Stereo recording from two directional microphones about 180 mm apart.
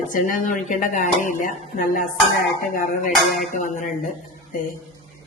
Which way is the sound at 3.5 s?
45° left (ahead or behind).